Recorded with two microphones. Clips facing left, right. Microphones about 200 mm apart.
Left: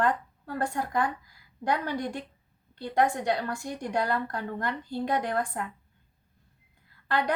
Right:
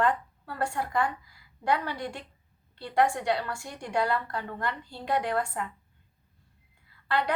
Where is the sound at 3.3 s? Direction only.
45° left (ahead or behind).